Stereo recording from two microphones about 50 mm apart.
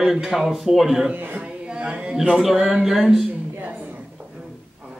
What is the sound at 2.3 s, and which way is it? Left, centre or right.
Speech, centre.